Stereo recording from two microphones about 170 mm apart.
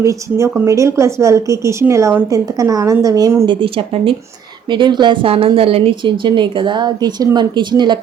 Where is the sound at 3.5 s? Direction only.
30° right (ahead or behind).